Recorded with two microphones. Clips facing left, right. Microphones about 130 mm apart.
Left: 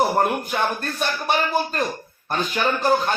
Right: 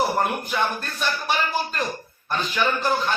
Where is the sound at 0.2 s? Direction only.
50° left (ahead or behind).